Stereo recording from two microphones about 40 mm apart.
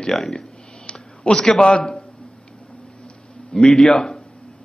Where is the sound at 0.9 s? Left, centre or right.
Left.